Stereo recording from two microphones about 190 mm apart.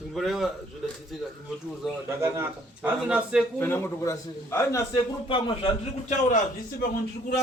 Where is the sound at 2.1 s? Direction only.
15° right (ahead or behind).